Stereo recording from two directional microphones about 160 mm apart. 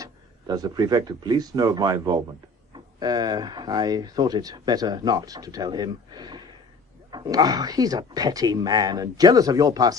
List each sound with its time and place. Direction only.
0.0 s speech: 25° right (ahead or behind)